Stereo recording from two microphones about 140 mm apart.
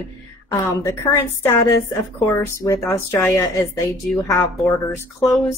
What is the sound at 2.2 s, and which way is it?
Speech, 20° left (ahead or behind).